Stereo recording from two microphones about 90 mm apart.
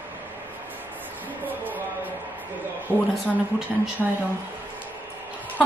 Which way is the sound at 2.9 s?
30° right (ahead or behind).